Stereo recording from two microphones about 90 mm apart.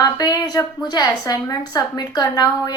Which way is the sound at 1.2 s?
35° left (ahead or behind).